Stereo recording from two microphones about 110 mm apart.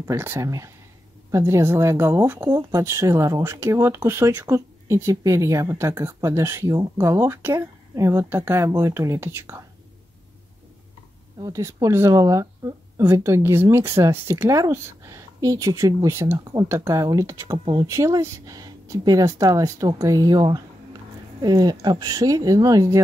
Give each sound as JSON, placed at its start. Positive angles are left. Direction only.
{"t": 0.0, "sound": "speech", "side_deg": -20}
{"t": 11.4, "sound": "speech", "side_deg": -30}